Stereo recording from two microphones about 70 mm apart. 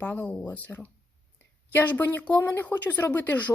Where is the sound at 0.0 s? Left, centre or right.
Left.